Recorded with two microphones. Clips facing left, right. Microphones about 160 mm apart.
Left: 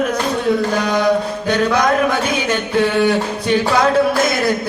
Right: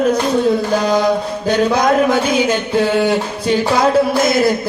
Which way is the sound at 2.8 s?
30° right (ahead or behind).